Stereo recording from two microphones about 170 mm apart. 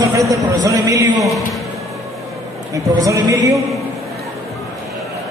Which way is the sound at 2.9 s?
20° right (ahead or behind).